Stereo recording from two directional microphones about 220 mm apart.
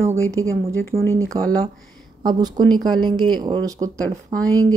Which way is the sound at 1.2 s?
15° right (ahead or behind).